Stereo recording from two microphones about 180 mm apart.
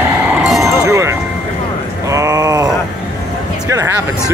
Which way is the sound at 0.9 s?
15° right (ahead or behind).